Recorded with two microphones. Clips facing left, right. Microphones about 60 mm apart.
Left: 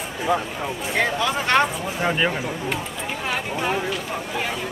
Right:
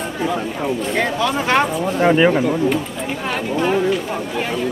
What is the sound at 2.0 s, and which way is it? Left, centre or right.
Speech, centre.